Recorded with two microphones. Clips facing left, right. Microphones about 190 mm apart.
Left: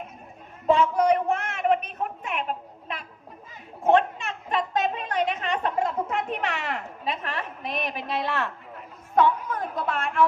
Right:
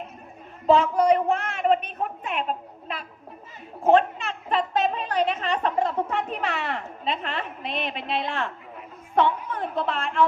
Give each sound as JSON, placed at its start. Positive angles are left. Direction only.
{"t": 0.7, "sound": "a woman's voice", "side_deg": -35}